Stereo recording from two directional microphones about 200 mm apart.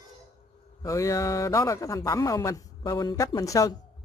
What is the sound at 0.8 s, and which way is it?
A man's voice, 15° left (ahead or behind).